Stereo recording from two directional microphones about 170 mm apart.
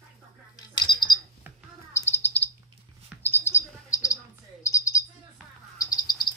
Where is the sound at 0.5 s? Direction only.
25° left (ahead or behind).